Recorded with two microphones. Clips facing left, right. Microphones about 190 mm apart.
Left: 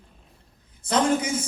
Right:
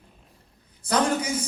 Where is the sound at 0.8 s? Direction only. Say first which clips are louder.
Left 1 dB; 25° left (ahead or behind).